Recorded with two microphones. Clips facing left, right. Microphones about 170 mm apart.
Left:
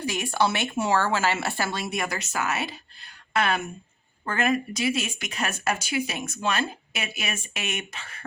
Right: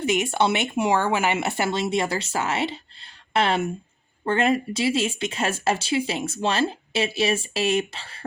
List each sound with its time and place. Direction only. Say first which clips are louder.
0.0 s speech: right 3 dB; 20° right (ahead or behind)